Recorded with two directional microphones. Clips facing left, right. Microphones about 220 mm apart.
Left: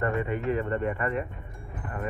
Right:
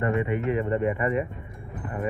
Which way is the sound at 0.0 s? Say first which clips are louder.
Right 3 dB; 15° right (ahead or behind).